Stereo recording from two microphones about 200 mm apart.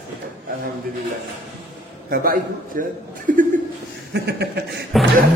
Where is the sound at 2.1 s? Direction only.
45° right (ahead or behind).